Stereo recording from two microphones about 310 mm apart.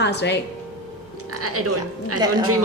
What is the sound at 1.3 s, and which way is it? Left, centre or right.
Speech, right.